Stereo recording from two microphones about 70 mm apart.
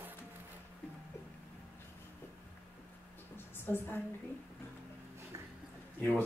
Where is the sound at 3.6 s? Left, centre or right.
Left.